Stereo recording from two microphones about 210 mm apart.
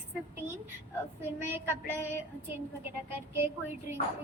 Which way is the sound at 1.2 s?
10° right (ahead or behind).